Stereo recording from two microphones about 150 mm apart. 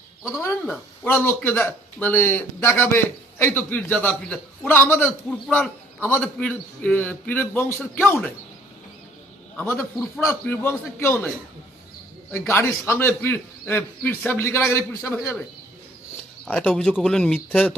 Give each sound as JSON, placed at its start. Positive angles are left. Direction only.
{"t": 0.2, "sound": "speech", "side_deg": 0}
{"t": 9.6, "sound": "speech", "side_deg": 15}
{"t": 12.3, "sound": "speech", "side_deg": 15}
{"t": 16.5, "sound": "speech", "side_deg": 10}